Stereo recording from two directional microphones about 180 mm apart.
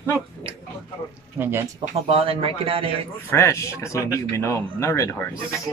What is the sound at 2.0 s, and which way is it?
Speech, 35° right (ahead or behind).